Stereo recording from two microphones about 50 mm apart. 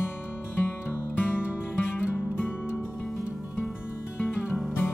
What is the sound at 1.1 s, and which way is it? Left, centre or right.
Music, left.